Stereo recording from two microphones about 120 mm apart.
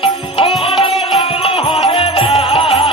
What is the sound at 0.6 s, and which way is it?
Music, 50° left (ahead or behind).